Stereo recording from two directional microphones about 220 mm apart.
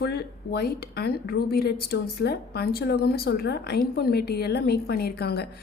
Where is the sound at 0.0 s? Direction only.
50° left (ahead or behind).